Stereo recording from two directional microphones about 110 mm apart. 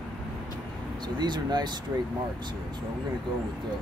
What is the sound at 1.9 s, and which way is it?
Speech, 25° right (ahead or behind).